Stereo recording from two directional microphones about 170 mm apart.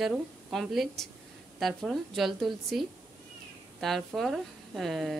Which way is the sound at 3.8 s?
Centre (ahead or behind).